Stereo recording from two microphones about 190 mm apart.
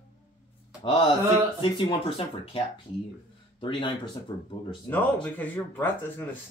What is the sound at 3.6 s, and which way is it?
Speech, 25° left (ahead or behind).